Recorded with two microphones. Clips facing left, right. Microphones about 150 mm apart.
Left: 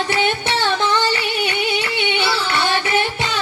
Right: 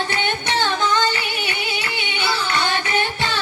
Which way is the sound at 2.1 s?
25° left (ahead or behind).